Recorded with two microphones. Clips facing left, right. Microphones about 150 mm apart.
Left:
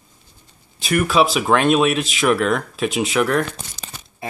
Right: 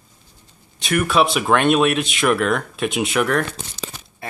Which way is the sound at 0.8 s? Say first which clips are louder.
Left 1 dB; centre (ahead or behind).